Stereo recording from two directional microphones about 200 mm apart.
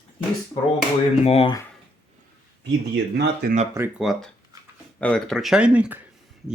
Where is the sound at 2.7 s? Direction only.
60° right (ahead or behind).